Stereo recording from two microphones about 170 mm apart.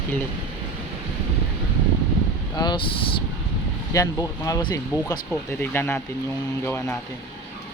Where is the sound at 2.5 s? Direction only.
25° left (ahead or behind).